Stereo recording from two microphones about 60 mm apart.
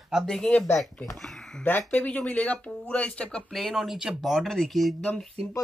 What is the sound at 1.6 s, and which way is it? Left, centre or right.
Speech, left.